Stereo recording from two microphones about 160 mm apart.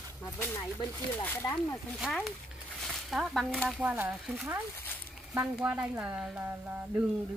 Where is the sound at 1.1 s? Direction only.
10° left (ahead or behind).